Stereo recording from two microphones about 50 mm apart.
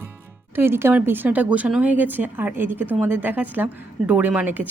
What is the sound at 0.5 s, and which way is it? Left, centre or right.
Speech, right.